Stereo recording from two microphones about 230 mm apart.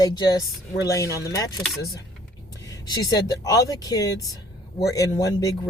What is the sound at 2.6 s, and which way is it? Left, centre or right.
Speech, centre.